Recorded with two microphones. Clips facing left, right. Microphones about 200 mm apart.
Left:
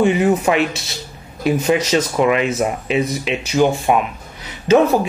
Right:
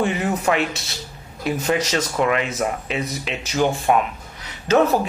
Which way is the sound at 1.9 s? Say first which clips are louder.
Left 5 dB; 20° left (ahead or behind).